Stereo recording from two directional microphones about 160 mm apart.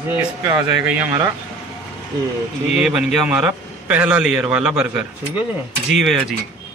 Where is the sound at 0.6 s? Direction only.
5° right (ahead or behind).